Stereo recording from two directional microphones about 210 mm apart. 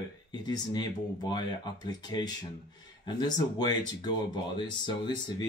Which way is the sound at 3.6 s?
20° left (ahead or behind).